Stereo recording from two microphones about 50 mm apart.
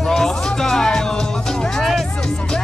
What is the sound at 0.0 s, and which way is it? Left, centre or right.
Music, centre.